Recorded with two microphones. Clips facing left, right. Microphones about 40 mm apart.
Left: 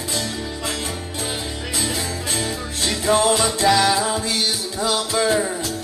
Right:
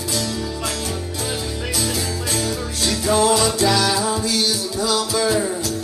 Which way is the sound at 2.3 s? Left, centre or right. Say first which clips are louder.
Right 2 dB; left.